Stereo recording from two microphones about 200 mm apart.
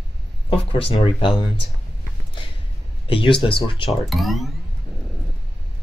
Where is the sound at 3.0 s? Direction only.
25° left (ahead or behind).